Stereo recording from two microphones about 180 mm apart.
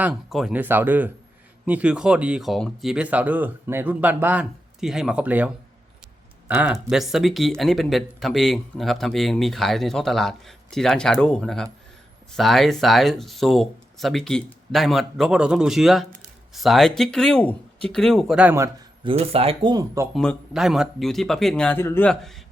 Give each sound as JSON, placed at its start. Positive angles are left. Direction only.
{"t": 0.0, "sound": "speech", "side_deg": 0}
{"t": 6.5, "sound": "speech", "side_deg": -5}
{"t": 19.0, "sound": "speech", "side_deg": -30}
{"t": 20.1, "sound": "speech", "side_deg": 0}